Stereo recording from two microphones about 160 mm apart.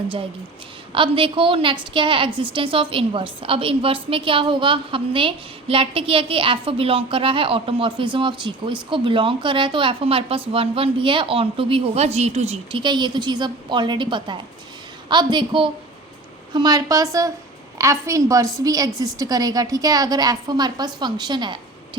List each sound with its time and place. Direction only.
0.9 s a woman's voice: 35° right (ahead or behind)
12.8 s a woman's voice: 30° right (ahead or behind)